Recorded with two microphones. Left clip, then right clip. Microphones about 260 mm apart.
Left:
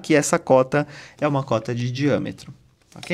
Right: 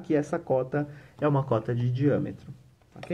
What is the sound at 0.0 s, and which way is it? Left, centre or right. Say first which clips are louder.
Speech: left 9 dB; left.